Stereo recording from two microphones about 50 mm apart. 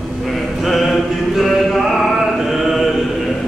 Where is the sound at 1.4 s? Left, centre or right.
Centre.